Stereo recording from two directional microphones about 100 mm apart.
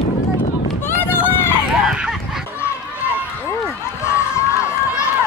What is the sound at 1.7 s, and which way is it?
Goose, 5° right (ahead or behind).